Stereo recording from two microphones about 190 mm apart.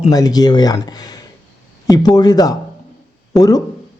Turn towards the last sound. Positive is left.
turn(degrees=20)  # may be behind; listen again after turning